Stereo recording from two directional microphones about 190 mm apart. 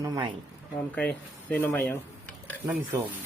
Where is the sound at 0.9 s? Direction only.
5° left (ahead or behind).